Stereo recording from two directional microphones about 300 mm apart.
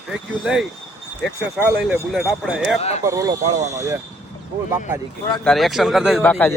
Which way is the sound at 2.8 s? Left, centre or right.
Left.